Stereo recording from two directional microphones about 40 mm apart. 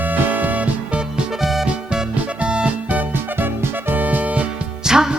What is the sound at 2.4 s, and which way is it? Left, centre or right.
Music, right.